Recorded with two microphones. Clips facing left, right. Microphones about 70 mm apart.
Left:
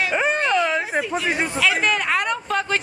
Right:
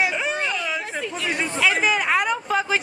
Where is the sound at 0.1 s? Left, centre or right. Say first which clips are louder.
Left 5 dB; left.